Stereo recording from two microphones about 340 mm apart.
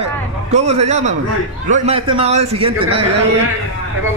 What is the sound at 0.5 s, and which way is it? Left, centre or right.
A man's voice, centre.